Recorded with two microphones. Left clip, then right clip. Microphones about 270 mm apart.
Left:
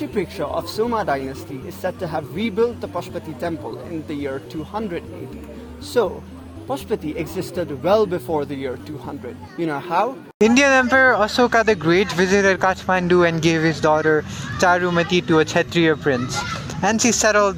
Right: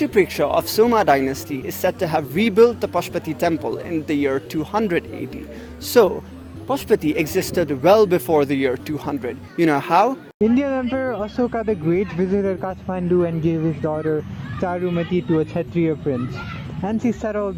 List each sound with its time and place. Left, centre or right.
0.0 s speech: right
10.4 s speech: left